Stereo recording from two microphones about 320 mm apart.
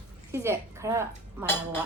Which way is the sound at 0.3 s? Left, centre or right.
Centre.